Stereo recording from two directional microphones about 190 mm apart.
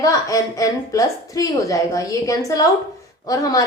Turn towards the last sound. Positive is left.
turn(degrees=20)  # may be behind; listen again after turning